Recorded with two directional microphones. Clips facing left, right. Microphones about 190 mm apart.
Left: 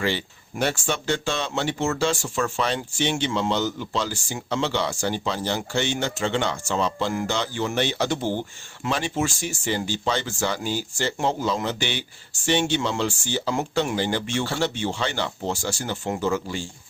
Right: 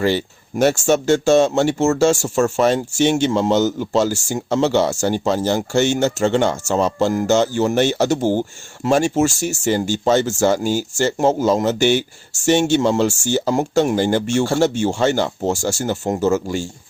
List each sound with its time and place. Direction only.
0.0 s speech: 45° right (ahead or behind)